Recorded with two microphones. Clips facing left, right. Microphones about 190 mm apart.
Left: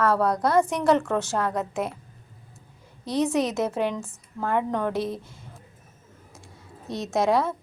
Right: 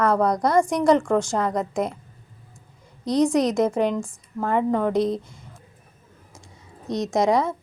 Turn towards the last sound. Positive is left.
turn(degrees=-15)  # may be behind; listen again after turning